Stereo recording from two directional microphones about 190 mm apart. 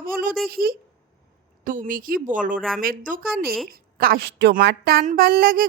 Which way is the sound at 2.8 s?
45° right (ahead or behind).